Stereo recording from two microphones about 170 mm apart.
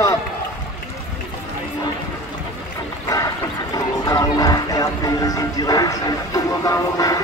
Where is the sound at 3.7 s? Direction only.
20° left (ahead or behind).